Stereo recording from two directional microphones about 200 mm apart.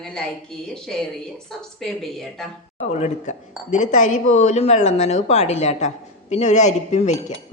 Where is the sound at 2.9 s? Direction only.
35° left (ahead or behind).